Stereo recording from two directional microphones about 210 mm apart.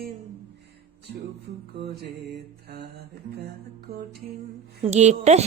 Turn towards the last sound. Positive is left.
turn(degrees=-35)  # may be behind; listen again after turning